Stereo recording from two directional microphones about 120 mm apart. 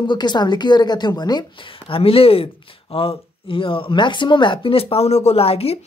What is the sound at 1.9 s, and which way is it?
Speech, 50° left (ahead or behind).